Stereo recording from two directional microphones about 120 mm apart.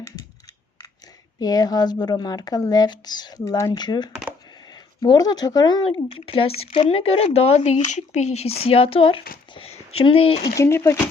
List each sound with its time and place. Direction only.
1.4 s speech: 30° left (ahead or behind); by 10.5 s 50° left (ahead or behind)
10.6 s speech: 25° left (ahead or behind)